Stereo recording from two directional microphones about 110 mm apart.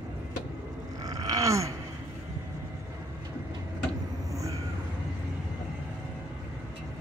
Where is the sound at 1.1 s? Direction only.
35° right (ahead or behind).